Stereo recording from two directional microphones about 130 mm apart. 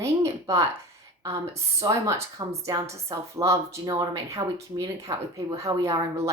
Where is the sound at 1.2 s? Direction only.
25° right (ahead or behind).